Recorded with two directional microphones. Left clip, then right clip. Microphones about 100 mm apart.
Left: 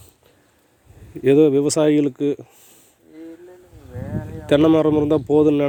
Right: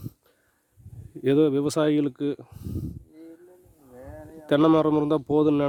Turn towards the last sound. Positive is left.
turn(degrees=-20)  # may be behind; listen again after turning